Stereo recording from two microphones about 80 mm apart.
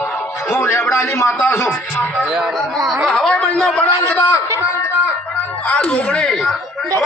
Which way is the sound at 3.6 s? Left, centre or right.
Centre.